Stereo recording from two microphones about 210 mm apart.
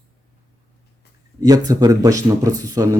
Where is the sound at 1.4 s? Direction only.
15° right (ahead or behind).